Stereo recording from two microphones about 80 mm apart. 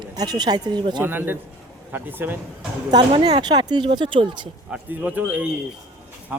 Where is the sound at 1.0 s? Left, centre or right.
Right.